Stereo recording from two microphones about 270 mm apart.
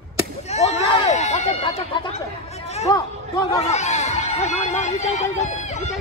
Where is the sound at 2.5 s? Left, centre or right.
Left.